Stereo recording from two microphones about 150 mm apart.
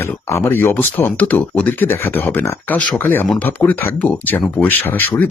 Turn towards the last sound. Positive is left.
turn(degrees=15)  # may be behind; listen again after turning